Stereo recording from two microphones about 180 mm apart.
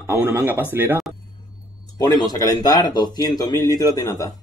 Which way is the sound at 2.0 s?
20° left (ahead or behind).